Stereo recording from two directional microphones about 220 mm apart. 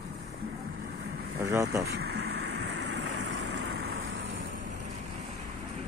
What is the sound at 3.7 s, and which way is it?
Vehicle, 70° right (ahead or behind).